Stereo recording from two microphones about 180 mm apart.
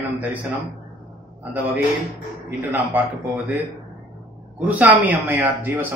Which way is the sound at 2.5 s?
10° right (ahead or behind).